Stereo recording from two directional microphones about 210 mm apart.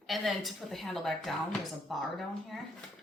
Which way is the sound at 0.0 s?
Centre (ahead or behind).